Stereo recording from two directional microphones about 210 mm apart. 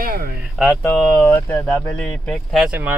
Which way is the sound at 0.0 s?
45° right (ahead or behind).